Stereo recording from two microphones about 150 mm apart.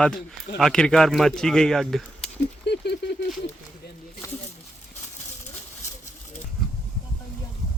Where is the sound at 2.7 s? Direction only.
90° left.